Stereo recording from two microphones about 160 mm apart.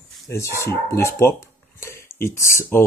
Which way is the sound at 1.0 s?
15° left (ahead or behind).